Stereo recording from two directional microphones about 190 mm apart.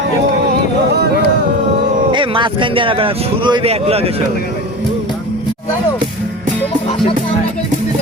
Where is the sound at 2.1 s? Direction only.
25° right (ahead or behind).